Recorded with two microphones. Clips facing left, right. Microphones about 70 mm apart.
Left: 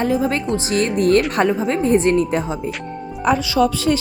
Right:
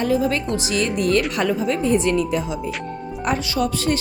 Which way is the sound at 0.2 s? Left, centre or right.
Left.